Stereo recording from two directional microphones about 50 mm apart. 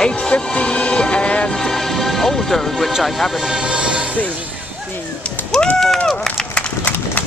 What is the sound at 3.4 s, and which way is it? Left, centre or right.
Vehicle, centre.